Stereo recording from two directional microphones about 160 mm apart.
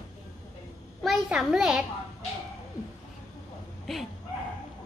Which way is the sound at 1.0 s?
Centre (ahead or behind).